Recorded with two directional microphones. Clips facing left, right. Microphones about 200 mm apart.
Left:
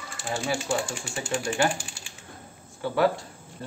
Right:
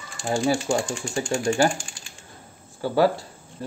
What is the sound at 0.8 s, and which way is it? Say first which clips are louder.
Speech: right 5 dB; 5° left (ahead or behind).